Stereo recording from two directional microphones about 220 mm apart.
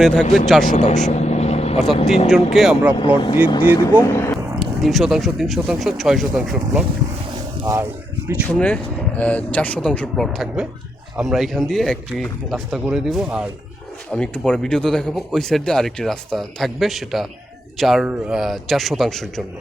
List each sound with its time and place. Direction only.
0.0 s speech: 5° left (ahead or behind)
0.7 s speech: 30° left (ahead or behind)
1.1 s vehicle: 30° left (ahead or behind)
2.3 s speech: centre (ahead or behind)
3.5 s speech: 20° left (ahead or behind)
4.6 s speech: centre (ahead or behind)
7.6 s speech: 10° right (ahead or behind)
8.5 s speech: 5° left (ahead or behind)